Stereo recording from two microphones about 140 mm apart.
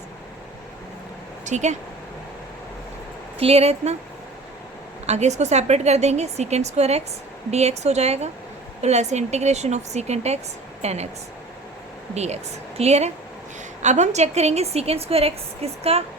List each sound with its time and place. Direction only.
1.5 s speech: 55° right (ahead or behind)
3.3 s a woman's voice: 45° right (ahead or behind)
5.0 s a woman's voice: 55° right (ahead or behind)
12.1 s a woman's voice: 50° right (ahead or behind)